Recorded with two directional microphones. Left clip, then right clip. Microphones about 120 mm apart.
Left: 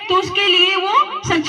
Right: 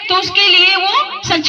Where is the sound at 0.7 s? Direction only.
45° right (ahead or behind).